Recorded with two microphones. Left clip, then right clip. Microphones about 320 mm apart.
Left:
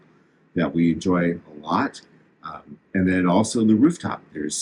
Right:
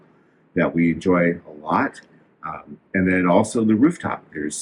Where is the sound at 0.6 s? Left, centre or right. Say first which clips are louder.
Right 2 dB; centre.